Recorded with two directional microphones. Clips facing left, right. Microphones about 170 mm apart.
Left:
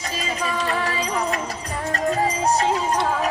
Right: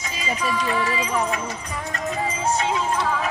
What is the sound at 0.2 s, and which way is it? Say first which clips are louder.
Music: right 1 dB; 40° left (ahead or behind).